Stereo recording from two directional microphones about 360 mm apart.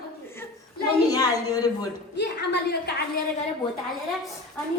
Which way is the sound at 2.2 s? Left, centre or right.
Left.